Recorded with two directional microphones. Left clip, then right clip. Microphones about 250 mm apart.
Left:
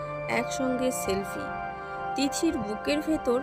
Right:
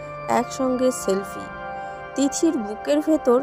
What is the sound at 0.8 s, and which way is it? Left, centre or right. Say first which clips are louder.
Speech: right 6 dB; centre.